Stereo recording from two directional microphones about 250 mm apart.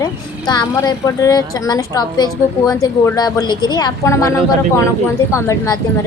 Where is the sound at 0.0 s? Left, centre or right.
Centre.